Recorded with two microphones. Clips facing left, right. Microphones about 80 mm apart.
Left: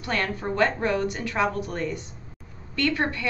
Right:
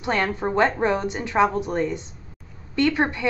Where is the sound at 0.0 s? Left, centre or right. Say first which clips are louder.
Right 4 dB; right.